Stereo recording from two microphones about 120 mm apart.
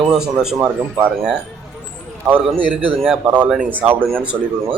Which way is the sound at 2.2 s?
15° right (ahead or behind).